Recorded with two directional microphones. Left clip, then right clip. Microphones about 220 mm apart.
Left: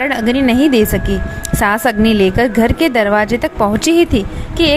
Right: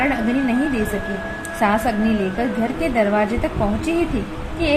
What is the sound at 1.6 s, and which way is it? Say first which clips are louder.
A woman's voice: left 6 dB; 40° left (ahead or behind).